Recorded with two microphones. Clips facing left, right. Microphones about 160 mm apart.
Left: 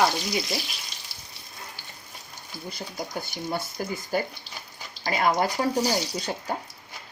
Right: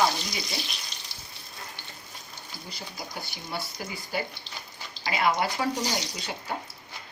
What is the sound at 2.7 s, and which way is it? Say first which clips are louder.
A woman's voice: left 6 dB; 45° left (ahead or behind).